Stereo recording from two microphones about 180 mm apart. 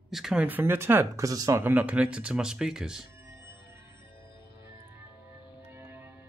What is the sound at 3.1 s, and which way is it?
Music, 15° right (ahead or behind).